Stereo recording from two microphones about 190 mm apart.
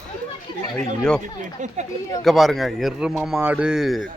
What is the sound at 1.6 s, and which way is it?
Speech, 40° right (ahead or behind).